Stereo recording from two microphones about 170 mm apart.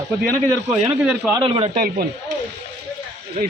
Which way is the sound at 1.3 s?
30° right (ahead or behind).